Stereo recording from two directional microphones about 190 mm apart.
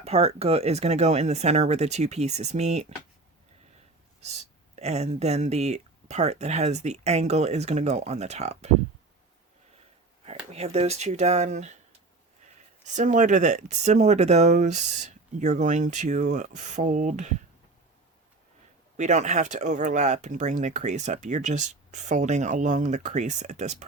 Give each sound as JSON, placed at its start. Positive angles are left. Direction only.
{"t": 0.0, "sound": "speech", "side_deg": -35}
{"t": 4.2, "sound": "speech", "side_deg": -35}
{"t": 10.2, "sound": "speech", "side_deg": -35}
{"t": 12.8, "sound": "speech", "side_deg": -40}
{"t": 18.9, "sound": "speech", "side_deg": -40}